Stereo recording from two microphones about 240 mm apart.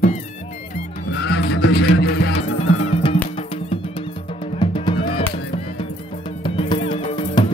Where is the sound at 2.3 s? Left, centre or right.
Left.